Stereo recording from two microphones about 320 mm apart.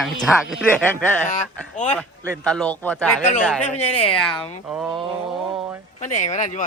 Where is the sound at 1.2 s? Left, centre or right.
Left.